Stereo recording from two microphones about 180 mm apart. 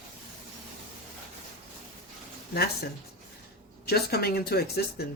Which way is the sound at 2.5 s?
60° left (ahead or behind).